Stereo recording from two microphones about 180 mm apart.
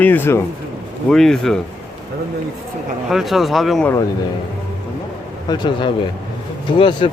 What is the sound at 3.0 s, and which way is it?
Speech, centre (ahead or behind).